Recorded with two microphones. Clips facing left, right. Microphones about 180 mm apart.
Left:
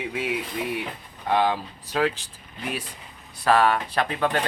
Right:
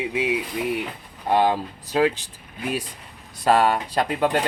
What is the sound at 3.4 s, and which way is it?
Speech, 20° right (ahead or behind).